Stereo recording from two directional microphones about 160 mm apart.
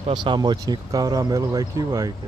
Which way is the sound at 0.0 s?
30° right (ahead or behind).